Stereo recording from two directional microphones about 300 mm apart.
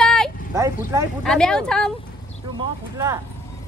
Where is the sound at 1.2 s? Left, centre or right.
Centre.